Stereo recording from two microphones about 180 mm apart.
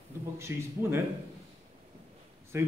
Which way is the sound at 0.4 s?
15° right (ahead or behind).